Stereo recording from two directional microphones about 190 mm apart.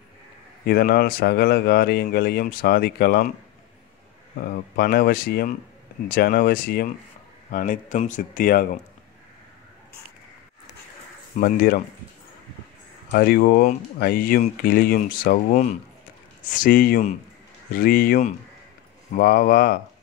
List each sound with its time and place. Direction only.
0.7 s speech: 55° left (ahead or behind)
4.4 s speech: 50° left (ahead or behind)
7.5 s speech: 45° left (ahead or behind)
11.3 s speech: 50° left (ahead or behind)
13.1 s speech: 55° left (ahead or behind)